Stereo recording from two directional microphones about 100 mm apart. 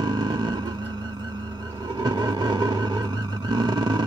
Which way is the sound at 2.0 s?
45° right (ahead or behind).